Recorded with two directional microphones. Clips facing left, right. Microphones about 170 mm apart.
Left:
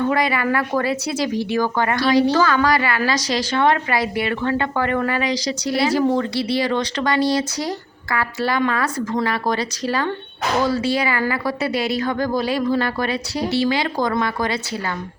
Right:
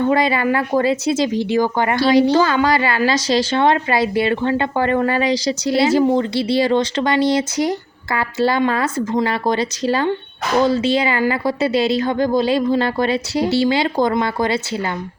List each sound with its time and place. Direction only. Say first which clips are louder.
0.1 s speech: right 3 dB; 25° right (ahead or behind)